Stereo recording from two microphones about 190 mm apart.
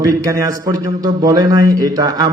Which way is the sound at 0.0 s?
15° right (ahead or behind).